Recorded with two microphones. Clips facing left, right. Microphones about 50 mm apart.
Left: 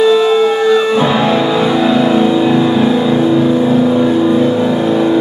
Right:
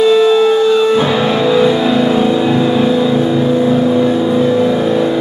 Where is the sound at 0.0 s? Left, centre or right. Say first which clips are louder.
Even; centre.